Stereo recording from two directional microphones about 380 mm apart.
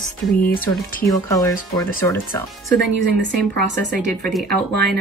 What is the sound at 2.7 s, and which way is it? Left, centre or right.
Speech, right.